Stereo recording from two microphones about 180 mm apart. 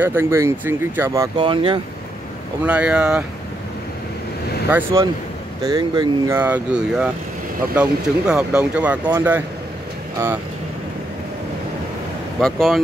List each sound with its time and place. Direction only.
0.0 s speech: 15° right (ahead or behind); by 1.8 s 30° right (ahead or behind)
2.6 s speech: 5° right (ahead or behind)
4.6 s speech: 10° right (ahead or behind)
5.6 s speech: 20° right (ahead or behind)
12.4 s speech: 5° left (ahead or behind)